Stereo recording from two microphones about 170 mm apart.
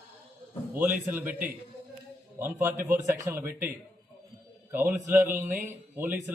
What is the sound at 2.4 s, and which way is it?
Speech, 15° right (ahead or behind).